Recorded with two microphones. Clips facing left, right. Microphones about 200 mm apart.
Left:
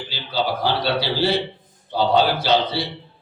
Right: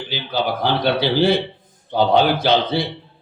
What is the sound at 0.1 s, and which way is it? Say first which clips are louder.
Speech: right 2 dB; 55° right (ahead or behind).